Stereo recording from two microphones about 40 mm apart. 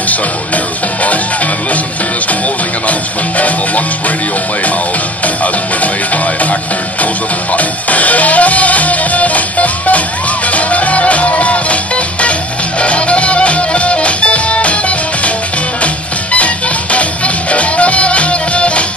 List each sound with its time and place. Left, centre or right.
2.9 s music: left
5.2 s music: left
7.5 s music: left